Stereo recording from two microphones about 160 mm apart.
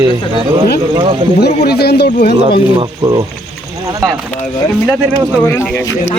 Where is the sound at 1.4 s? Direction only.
85° left.